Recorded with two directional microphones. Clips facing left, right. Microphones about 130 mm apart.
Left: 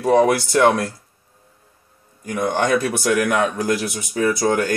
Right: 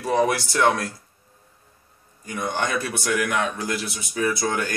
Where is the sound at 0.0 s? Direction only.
50° left (ahead or behind).